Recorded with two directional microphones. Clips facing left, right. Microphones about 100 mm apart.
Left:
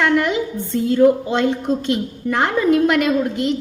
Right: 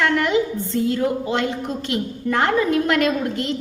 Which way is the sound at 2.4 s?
20° left (ahead or behind).